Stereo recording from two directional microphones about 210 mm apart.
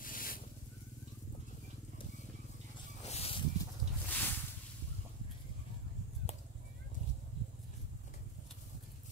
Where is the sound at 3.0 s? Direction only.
30° left (ahead or behind).